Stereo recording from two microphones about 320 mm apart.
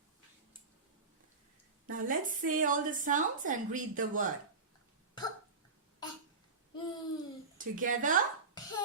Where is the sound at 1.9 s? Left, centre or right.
Right.